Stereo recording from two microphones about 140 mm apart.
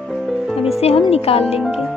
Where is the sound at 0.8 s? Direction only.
45° left (ahead or behind).